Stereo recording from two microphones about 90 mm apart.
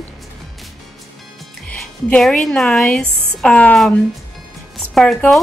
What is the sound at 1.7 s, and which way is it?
Music, 15° left (ahead or behind).